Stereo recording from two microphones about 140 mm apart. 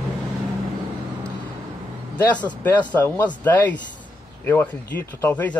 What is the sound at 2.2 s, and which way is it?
Speech, 10° left (ahead or behind).